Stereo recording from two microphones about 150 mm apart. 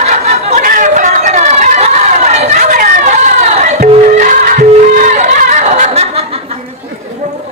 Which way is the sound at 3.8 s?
55° right (ahead or behind).